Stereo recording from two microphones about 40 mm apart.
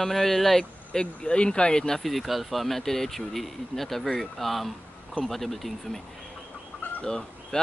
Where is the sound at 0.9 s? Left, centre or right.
Left.